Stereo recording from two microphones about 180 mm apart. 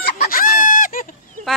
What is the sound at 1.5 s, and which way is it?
Speech, centre (ahead or behind).